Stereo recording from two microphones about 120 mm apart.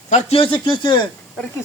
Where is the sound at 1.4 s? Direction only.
10° left (ahead or behind).